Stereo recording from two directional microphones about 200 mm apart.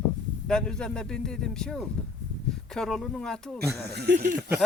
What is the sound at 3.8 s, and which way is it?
Speech, 55° right (ahead or behind).